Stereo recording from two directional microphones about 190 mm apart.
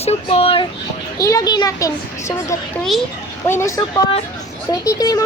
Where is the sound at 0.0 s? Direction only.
30° left (ahead or behind).